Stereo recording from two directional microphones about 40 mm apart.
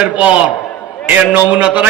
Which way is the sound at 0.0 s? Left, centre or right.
Right.